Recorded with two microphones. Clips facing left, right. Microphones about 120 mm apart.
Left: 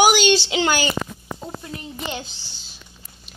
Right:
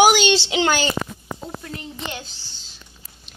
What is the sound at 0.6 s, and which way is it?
Speech, 5° left (ahead or behind).